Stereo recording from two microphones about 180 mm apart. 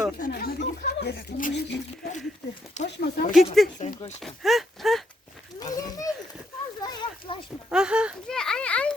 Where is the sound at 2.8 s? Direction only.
40° left (ahead or behind).